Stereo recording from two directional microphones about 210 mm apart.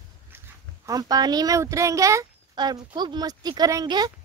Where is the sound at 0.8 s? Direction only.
15° right (ahead or behind).